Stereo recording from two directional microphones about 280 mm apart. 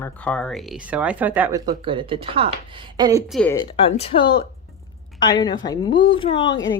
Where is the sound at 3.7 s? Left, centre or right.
Centre.